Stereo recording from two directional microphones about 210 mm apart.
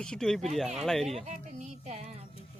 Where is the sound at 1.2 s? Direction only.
35° right (ahead or behind).